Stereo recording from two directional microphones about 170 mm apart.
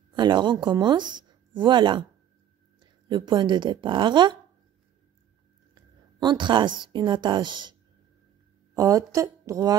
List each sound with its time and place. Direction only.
0.1 s speech: 25° right (ahead or behind)
5.8 s a woman's voice: 25° right (ahead or behind)
8.7 s speech: 20° right (ahead or behind)